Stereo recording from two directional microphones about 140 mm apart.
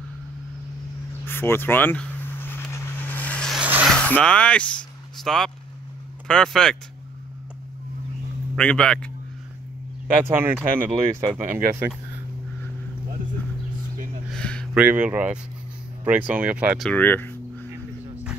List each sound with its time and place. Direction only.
1.2 s vehicle: 15° left (ahead or behind)
3.5 s a sound: 5° right (ahead or behind)
3.9 s vehicle: 5° left (ahead or behind)
6.2 s speech: 5° left (ahead or behind)
8.5 s speech: 5° left (ahead or behind)
10.3 s speech: 15° right (ahead or behind)
14.3 s a sound: 5° left (ahead or behind)
14.7 s speech: 10° right (ahead or behind)
16.9 s a sound: 15° left (ahead or behind)